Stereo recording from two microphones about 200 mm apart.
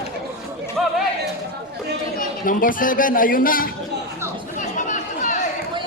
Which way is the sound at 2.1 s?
45° left (ahead or behind).